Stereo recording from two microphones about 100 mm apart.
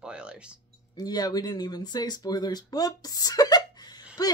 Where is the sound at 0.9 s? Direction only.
40° left (ahead or behind).